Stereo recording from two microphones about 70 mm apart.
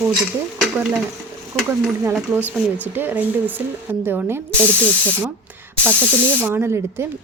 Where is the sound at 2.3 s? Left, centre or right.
Right.